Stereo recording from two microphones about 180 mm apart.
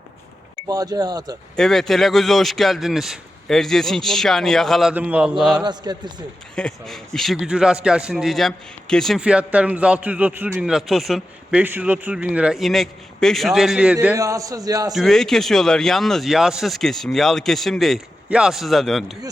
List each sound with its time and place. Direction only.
0.7 s a man's voice: 20° right (ahead or behind)
1.5 s a man's voice: centre (ahead or behind)
5.6 s a man's voice: 25° right (ahead or behind)
6.6 s a man's voice: 5° left (ahead or behind)
14.2 s a man's voice: 20° right (ahead or behind)
14.9 s a man's voice: centre (ahead or behind)